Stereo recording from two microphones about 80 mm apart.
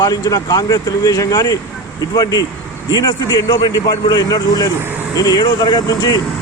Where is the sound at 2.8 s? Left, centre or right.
Left.